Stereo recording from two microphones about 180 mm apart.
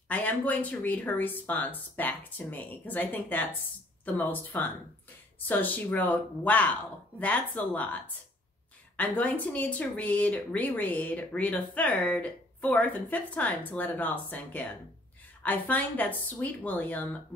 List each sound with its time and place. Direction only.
0.1 s speech: 10° left (ahead or behind)